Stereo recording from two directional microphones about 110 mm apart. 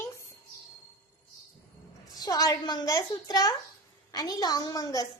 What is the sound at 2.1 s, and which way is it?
A woman's voice, 40° left (ahead or behind).